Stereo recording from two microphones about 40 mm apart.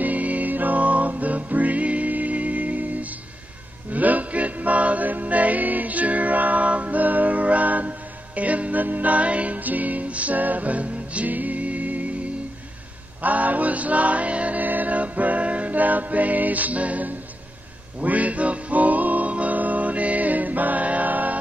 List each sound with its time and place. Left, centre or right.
0.0 s music: right
11.2 s music: right
13.2 s music: right